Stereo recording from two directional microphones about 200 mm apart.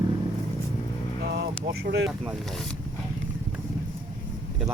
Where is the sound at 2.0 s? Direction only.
5° right (ahead or behind).